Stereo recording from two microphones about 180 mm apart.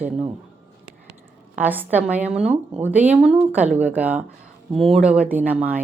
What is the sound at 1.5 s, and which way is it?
A woman's voice, 10° right (ahead or behind).